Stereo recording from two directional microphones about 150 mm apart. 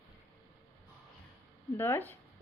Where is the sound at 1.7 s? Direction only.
15° left (ahead or behind).